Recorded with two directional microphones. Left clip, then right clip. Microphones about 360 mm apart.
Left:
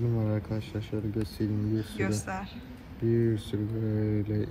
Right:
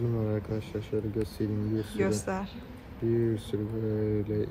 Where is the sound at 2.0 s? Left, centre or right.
Centre.